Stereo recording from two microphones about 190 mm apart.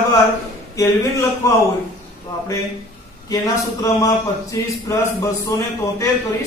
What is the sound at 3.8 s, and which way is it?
A man's voice, 15° left (ahead or behind).